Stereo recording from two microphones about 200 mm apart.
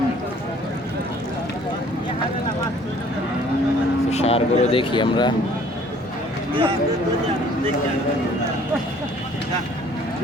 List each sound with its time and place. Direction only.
4.1 s speech: 30° left (ahead or behind)